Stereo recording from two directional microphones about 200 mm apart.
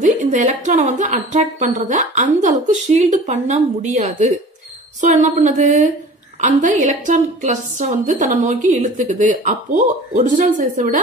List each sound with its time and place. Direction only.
0.0 s a woman's voice: 40° right (ahead or behind)